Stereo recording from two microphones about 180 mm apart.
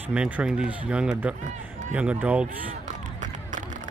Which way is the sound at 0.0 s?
10° right (ahead or behind).